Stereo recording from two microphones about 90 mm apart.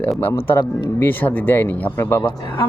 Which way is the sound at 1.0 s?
20° left (ahead or behind).